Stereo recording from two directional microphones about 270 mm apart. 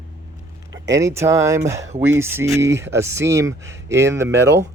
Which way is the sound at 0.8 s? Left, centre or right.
Centre.